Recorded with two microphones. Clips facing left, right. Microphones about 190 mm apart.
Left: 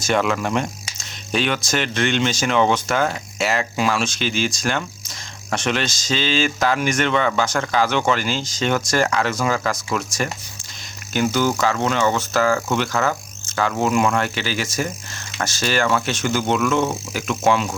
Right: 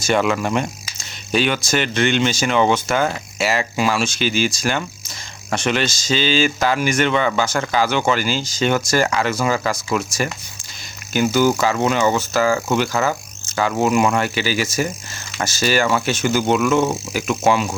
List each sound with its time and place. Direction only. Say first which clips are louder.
0.0 s speech: right 2 dB; centre (ahead or behind)